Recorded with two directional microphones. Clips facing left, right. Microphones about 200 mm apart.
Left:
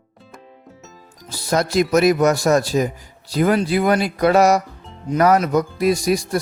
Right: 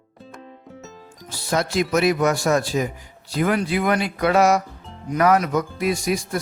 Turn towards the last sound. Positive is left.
turn(degrees=35)  # may be behind; listen again after turning